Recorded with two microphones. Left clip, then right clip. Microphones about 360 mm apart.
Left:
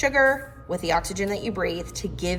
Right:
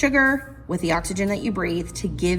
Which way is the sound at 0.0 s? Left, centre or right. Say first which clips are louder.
Right 1 dB; centre.